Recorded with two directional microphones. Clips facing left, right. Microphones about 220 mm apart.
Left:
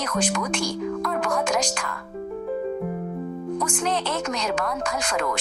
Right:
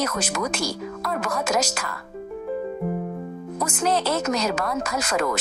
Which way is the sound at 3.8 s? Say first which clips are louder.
Right 6 dB; 40° right (ahead or behind).